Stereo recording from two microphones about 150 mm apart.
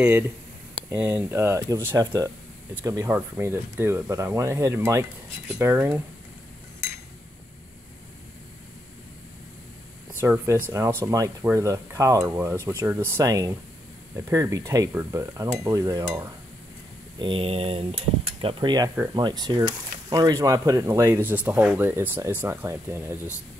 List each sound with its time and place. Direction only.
0.8 s speech: 15° right (ahead or behind)
10.2 s speech: 15° right (ahead or behind)
17.2 s speech: 35° right (ahead or behind); by 23.1 s 15° right (ahead or behind)